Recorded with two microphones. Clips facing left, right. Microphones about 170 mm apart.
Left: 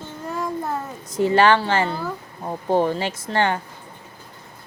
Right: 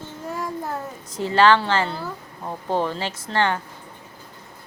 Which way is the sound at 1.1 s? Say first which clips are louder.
Left 1 dB; 15° left (ahead or behind).